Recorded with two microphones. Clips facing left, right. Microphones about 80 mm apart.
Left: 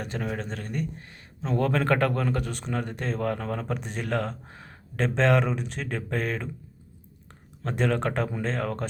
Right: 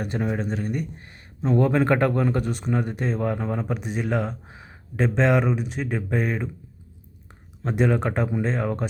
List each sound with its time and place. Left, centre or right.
0.2 s speech: centre
2.5 s speech: centre
7.6 s speech: centre